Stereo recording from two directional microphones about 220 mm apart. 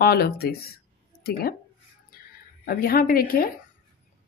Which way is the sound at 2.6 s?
40° left (ahead or behind).